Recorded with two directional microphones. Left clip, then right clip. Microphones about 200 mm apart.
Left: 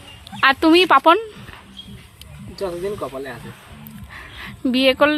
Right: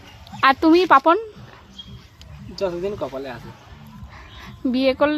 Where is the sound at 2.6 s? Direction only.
20° right (ahead or behind).